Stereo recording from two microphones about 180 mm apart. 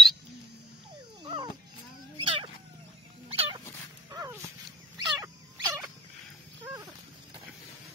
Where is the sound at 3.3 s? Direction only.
30° right (ahead or behind).